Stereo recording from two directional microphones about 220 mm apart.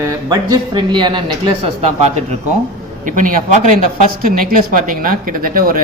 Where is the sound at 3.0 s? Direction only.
35° right (ahead or behind).